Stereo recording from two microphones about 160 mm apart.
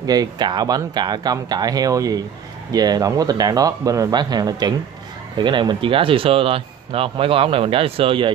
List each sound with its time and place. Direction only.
0.0 s speech: 25° right (ahead or behind)